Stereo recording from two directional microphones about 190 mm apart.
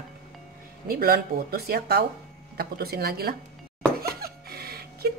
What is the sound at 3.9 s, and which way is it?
Music, 55° right (ahead or behind).